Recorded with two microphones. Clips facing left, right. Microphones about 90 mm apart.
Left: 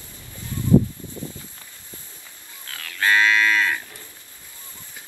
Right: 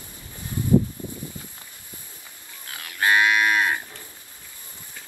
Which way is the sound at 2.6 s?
20° right (ahead or behind).